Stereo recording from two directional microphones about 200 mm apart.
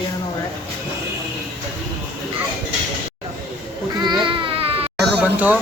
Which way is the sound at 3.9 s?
20° right (ahead or behind).